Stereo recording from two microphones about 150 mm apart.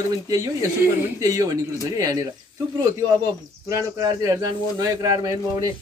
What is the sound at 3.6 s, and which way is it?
A man's voice, 25° right (ahead or behind).